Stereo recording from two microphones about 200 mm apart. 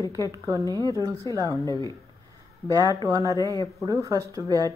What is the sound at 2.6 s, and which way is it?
Speech, 20° right (ahead or behind).